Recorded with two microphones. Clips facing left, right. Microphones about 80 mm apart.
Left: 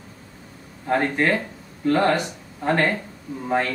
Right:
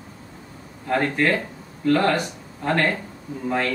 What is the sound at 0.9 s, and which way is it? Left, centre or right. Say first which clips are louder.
A man's voice: even; centre.